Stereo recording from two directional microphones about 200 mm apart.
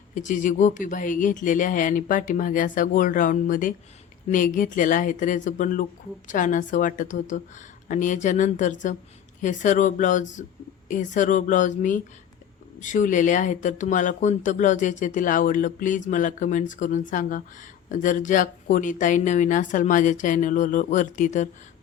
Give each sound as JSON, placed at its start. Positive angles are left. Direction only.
{"t": 0.1, "sound": "speech", "side_deg": 40}